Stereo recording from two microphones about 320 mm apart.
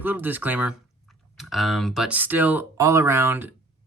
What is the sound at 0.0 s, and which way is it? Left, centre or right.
Speech, centre.